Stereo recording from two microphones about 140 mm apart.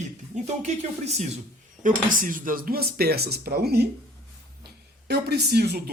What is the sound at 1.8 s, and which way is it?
Speech, 75° right (ahead or behind).